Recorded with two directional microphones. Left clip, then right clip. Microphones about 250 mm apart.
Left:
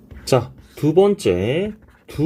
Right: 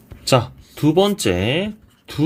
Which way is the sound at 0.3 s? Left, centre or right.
Centre.